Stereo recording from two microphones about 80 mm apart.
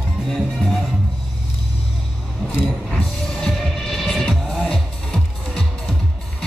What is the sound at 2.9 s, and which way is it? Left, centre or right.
Music, centre.